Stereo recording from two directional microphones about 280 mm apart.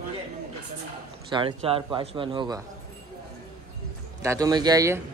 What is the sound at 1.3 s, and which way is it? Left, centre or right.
Speech, centre.